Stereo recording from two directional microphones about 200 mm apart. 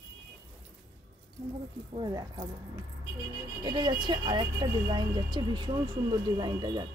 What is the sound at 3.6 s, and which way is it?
Speech, 20° right (ahead or behind).